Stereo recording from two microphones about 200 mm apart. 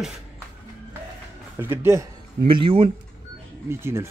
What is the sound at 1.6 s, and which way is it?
Speech, 10° right (ahead or behind).